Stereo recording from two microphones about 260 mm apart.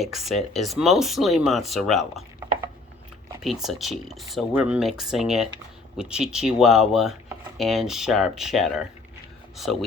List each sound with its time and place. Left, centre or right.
0.0 s speech: centre
3.4 s speech: centre